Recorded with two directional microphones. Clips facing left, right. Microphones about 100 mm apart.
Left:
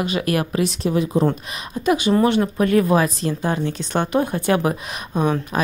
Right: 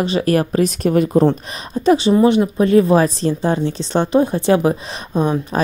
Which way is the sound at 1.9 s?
25° right (ahead or behind).